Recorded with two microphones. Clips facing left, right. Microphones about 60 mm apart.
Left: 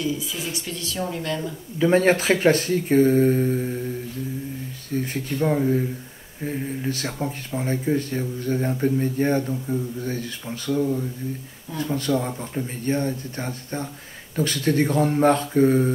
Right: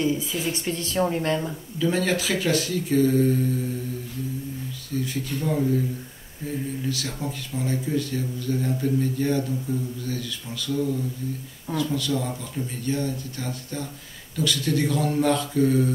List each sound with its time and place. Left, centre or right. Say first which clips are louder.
0.0 s speech: right 2 dB; right
1.8 s speech: left 6 dB; left
4.9 s speech: left 2 dB; left